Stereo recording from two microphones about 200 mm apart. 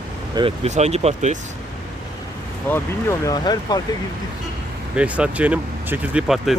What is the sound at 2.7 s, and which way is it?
Speech, 15° left (ahead or behind).